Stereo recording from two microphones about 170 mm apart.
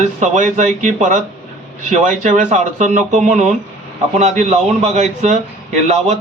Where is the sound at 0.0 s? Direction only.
45° right (ahead or behind).